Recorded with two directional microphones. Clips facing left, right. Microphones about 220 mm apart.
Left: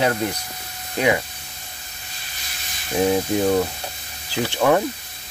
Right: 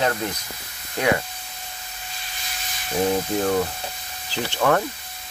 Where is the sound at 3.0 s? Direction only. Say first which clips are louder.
Left 3 dB; 10° left (ahead or behind).